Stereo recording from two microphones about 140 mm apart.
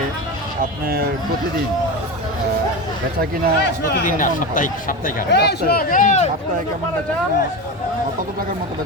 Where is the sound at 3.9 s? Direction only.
70° left (ahead or behind).